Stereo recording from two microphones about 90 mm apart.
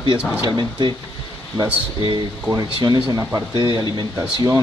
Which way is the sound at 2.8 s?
45° right (ahead or behind).